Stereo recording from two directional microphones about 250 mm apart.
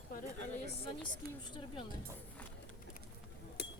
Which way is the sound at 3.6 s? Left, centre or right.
Left.